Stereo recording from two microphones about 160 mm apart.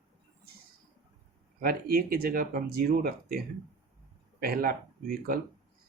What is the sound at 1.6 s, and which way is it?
Speech, 70° right (ahead or behind).